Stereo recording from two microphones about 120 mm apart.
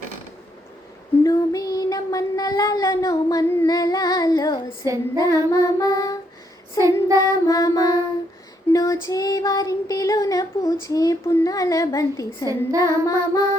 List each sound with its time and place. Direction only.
1.2 s child singing: 30° left (ahead or behind)
6.7 s child singing: 30° right (ahead or behind)
7.4 s child singing: 30° left (ahead or behind)